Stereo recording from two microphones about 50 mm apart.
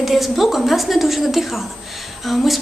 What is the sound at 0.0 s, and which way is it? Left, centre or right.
Speech, centre.